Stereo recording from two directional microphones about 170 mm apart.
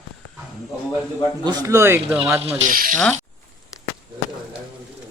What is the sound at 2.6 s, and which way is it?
Speech, 55° right (ahead or behind).